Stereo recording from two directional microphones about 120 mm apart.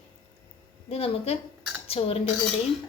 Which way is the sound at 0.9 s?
55° left (ahead or behind).